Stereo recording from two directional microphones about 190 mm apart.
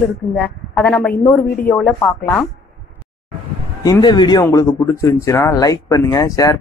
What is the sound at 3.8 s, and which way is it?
Speech, 20° left (ahead or behind).